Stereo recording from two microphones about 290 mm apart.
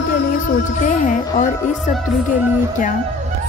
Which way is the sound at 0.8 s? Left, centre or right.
Left.